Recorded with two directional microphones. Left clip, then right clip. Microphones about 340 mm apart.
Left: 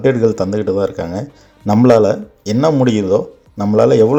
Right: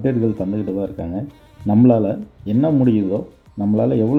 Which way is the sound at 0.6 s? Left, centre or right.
Left.